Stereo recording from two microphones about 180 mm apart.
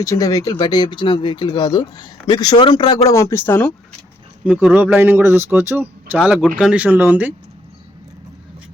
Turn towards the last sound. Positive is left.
turn(degrees=-10)  # may be behind; listen again after turning